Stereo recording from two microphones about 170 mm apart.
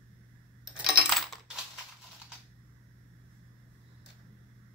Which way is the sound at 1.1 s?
Centre (ahead or behind).